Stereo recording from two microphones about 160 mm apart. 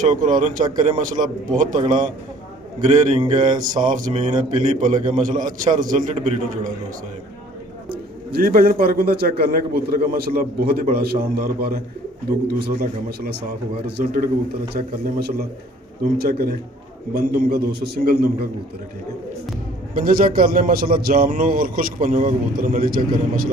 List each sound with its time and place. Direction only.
0.1 s a man's voice: 50° right (ahead or behind)
7.9 s a man's voice: 65° right (ahead or behind)
19.9 s a man's voice: 60° right (ahead or behind)